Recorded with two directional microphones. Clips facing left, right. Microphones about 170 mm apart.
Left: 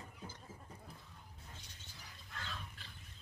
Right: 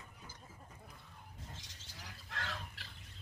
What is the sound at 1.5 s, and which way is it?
Bird, 90° right.